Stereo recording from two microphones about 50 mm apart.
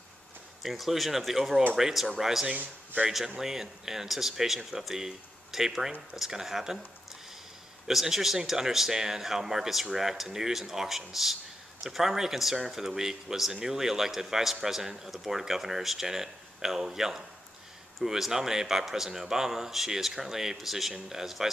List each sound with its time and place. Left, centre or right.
0.6 s speech: centre
2.5 s a man's voice: right
3.1 s speech: centre
7.9 s speech: centre